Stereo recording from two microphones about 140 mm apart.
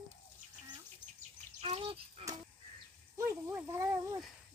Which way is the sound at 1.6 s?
45° right (ahead or behind).